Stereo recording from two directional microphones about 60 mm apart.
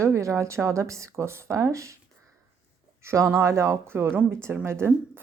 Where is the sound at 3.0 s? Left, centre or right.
Right.